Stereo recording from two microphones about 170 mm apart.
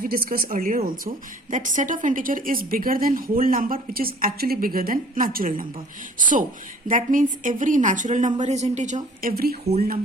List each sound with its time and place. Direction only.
0.0 s a woman's voice: 60° right (ahead or behind)
9.3 s a woman's voice: 65° right (ahead or behind)